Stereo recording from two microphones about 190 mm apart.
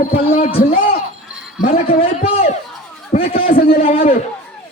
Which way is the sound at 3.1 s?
30° left (ahead or behind).